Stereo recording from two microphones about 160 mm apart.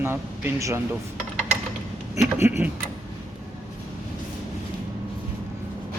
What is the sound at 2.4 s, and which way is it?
Speech, 10° right (ahead or behind).